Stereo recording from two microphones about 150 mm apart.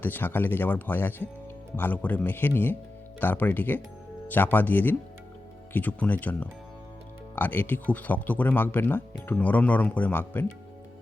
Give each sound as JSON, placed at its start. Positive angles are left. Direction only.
{"t": 0.0, "sound": "speech", "side_deg": 15}